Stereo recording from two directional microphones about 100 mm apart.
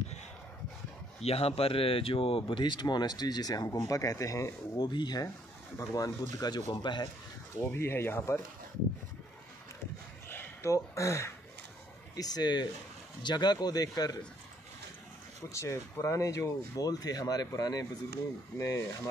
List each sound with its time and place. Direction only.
1.2 s speech: 80° left; by 3.6 s 40° left (ahead or behind)
3.6 s speech: 30° left (ahead or behind); by 7.1 s 50° left (ahead or behind)
7.7 s speech: 25° left (ahead or behind)
10.2 s a sound: 25° left (ahead or behind)
12.2 s speech: 40° left (ahead or behind)
15.5 s speech: 30° left (ahead or behind)